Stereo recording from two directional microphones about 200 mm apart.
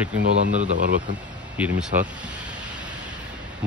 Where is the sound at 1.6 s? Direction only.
5° right (ahead or behind).